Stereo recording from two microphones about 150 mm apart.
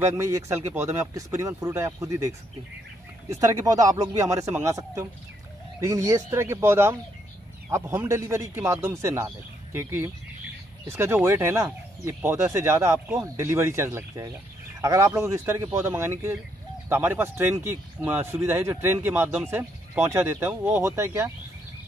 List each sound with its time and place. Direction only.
0.0 s speech: 20° right (ahead or behind)